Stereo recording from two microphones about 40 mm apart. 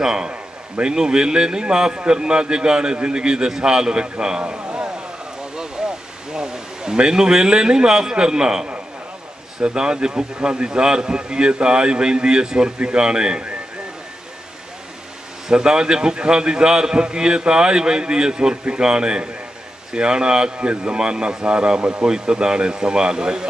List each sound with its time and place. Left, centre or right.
0.0 s a man's voice: centre
0.3 s a sound: right
0.9 s a man's voice: centre
5.4 s a sound: right
9.6 s a man's voice: right
15.4 s a man's voice: centre